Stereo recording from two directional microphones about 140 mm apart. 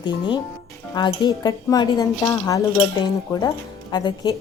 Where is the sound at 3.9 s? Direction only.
30° left (ahead or behind).